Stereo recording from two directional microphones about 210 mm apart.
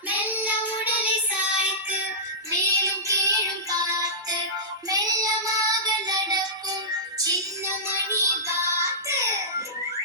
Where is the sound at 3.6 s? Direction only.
15° right (ahead or behind).